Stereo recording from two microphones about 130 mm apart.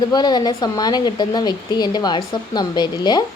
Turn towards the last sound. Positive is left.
turn(degrees=35)  # may be behind; listen again after turning